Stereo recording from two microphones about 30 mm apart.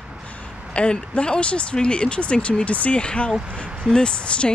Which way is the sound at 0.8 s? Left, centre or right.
Left.